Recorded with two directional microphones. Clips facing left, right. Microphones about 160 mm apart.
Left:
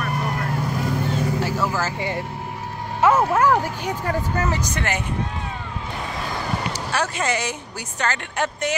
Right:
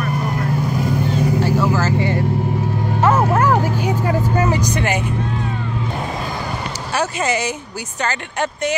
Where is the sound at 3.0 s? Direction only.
5° left (ahead or behind); by 5.0 s 15° right (ahead or behind).